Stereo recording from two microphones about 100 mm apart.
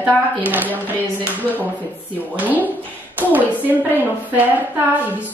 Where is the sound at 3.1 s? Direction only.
15° right (ahead or behind).